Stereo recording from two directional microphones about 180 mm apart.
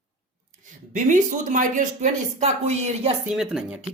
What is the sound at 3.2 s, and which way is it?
Speech, 5° right (ahead or behind).